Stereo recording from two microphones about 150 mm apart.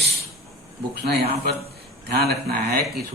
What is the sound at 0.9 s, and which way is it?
Speech, 90° right.